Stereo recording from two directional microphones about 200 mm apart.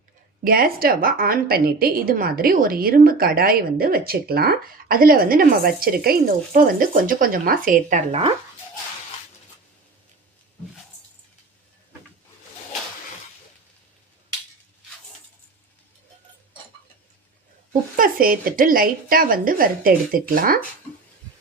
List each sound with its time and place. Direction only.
0.4 s a woman's voice: 45° right (ahead or behind)
17.9 s a woman's voice: 45° right (ahead or behind)